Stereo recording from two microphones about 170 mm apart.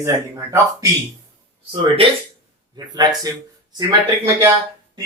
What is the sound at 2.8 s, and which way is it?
Speech, 25° right (ahead or behind).